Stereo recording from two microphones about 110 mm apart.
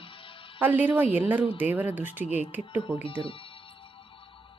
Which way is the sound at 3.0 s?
55° left (ahead or behind).